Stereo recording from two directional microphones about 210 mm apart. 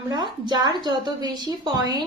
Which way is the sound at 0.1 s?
20° right (ahead or behind).